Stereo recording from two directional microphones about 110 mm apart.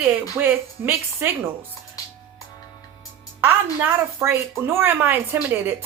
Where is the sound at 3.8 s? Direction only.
20° right (ahead or behind).